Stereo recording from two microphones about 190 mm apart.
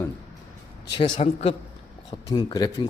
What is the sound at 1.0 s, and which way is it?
Speech, 35° left (ahead or behind).